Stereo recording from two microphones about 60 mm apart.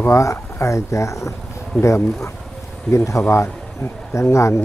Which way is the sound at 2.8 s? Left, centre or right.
Left.